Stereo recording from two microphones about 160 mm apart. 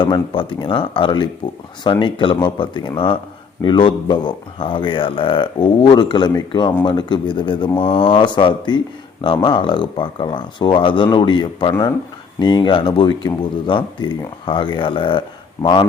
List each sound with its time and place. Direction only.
0.0 s speech: 30° left (ahead or behind)